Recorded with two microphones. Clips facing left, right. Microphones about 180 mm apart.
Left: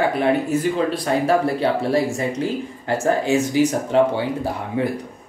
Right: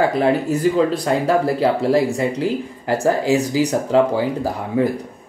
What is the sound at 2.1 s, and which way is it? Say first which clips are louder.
Speech: right 3 dB; 35° right (ahead or behind).